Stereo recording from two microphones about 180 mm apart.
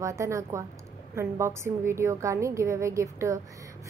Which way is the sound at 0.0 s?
15° right (ahead or behind).